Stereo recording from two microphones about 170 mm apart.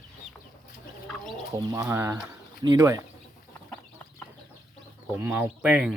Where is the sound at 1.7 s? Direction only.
15° right (ahead or behind).